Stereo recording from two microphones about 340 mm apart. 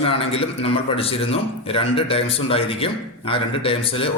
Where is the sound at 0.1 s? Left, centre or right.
Centre.